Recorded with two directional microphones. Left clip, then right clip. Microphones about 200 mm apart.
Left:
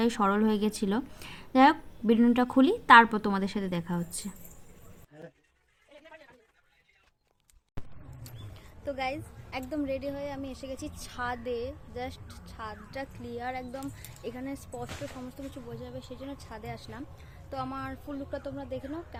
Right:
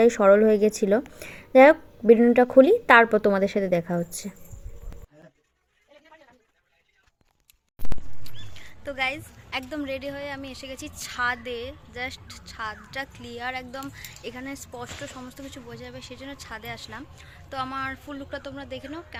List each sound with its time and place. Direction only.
0.0 s a woman's voice: 5° right (ahead or behind)
8.5 s a woman's voice: centre (ahead or behind)